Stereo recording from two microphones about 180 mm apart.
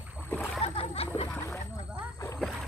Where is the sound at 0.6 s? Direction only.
35° left (ahead or behind).